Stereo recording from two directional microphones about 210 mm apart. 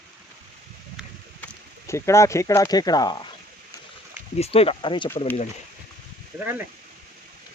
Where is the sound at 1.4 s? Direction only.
15° left (ahead or behind).